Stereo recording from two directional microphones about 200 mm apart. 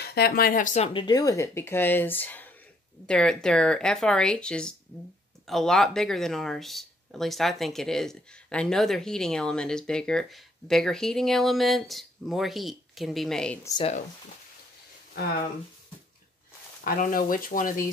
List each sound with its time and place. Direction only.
0.0 s speech: 55° left (ahead or behind)
0.9 s speech: 20° left (ahead or behind); by 13.6 s 5° left (ahead or behind)
16.8 s speech: 45° left (ahead or behind)